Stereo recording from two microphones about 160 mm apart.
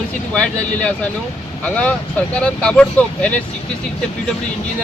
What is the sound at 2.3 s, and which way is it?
Speech, 5° left (ahead or behind).